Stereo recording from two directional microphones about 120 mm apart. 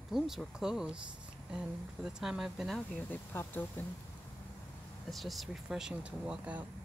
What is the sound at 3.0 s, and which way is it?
Speech, 15° left (ahead or behind).